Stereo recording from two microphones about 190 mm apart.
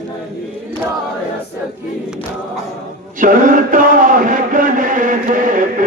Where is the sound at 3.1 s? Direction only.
45° right (ahead or behind).